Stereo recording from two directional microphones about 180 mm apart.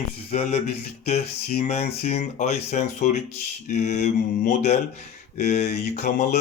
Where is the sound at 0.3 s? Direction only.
35° left (ahead or behind).